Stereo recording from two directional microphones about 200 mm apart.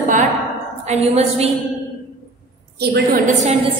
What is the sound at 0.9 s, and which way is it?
Speech, 35° right (ahead or behind).